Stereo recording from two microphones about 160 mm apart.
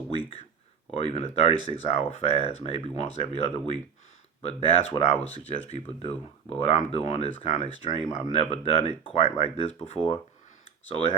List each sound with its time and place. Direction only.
0.9 s speech: 40° left (ahead or behind)